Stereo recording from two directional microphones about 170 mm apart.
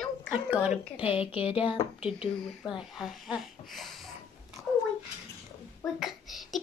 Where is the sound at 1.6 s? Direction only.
35° left (ahead or behind).